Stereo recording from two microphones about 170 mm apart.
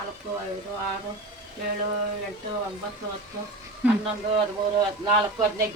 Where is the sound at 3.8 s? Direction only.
10° right (ahead or behind).